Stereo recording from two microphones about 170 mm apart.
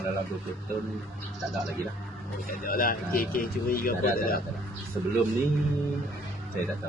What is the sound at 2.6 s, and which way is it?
Speech, 60° left (ahead or behind).